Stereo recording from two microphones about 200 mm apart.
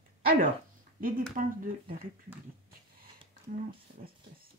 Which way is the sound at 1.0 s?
45° right (ahead or behind).